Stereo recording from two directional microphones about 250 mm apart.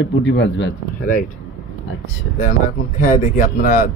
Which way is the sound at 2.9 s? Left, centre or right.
Left.